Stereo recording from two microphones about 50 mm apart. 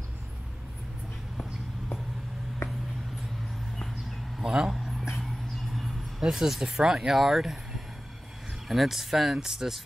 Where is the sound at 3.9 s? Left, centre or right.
Centre.